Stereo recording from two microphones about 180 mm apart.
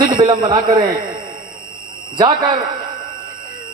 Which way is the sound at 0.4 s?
25° right (ahead or behind).